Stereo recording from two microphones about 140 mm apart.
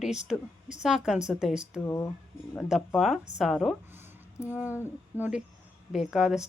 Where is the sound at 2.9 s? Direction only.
Centre (ahead or behind).